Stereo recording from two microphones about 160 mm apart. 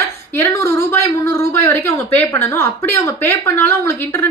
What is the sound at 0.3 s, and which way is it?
A woman's voice, 15° left (ahead or behind).